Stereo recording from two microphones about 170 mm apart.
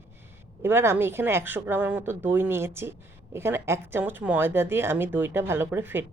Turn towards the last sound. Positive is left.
turn(degrees=-10)  # may be behind; listen again after turning